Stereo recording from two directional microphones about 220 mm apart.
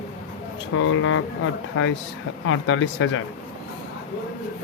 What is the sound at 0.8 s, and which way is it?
Speech, 65° left (ahead or behind).